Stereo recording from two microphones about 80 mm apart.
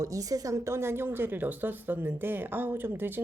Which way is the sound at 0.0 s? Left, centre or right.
Right.